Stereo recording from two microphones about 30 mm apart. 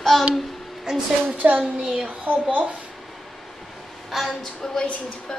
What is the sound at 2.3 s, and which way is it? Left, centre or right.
Speech, right.